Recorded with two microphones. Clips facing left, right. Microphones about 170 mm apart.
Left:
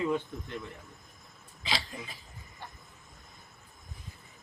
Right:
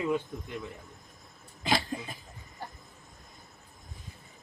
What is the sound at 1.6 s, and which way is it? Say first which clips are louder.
Burping: right 7 dB; 50° right (ahead or behind).